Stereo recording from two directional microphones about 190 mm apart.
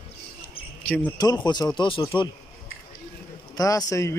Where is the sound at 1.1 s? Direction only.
20° left (ahead or behind).